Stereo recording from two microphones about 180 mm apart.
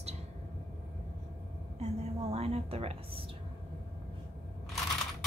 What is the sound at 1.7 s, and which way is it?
A woman's voice, 35° right (ahead or behind).